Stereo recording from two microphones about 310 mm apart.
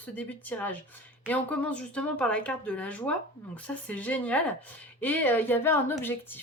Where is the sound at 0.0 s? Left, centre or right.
Centre.